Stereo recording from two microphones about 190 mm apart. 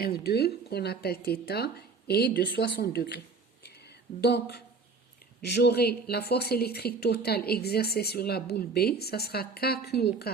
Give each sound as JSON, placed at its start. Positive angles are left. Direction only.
{"t": 0.0, "sound": "speech", "side_deg": 55}
{"t": 4.2, "sound": "speech", "side_deg": 60}